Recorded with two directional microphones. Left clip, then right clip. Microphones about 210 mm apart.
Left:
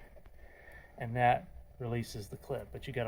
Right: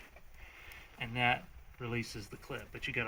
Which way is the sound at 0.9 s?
50° left (ahead or behind).